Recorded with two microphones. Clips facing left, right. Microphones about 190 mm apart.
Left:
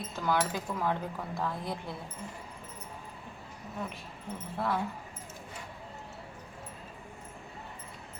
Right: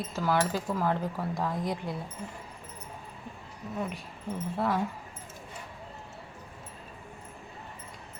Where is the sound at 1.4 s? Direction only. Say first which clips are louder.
Right 3 dB; 15° right (ahead or behind).